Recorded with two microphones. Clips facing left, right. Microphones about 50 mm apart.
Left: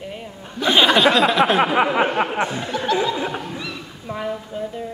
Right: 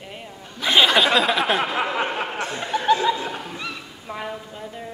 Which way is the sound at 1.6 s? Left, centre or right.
Left.